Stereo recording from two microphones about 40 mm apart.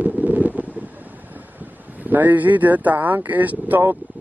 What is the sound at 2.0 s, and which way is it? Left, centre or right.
Speech, right.